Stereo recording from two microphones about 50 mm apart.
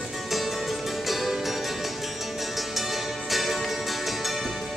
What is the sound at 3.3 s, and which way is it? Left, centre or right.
Music, centre.